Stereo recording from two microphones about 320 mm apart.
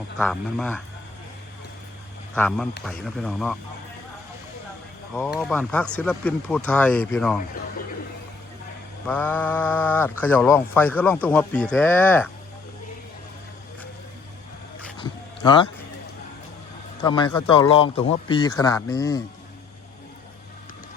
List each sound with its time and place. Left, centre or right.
0.2 s speech: centre
2.3 s speech: centre
5.1 s speech: centre
9.0 s speech: centre
14.9 s a sound: centre
17.0 s a man's voice: centre